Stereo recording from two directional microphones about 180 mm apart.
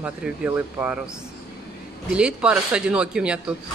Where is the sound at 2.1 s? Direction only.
5° right (ahead or behind).